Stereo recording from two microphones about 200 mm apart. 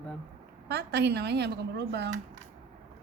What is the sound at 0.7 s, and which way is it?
Speech, 55° right (ahead or behind).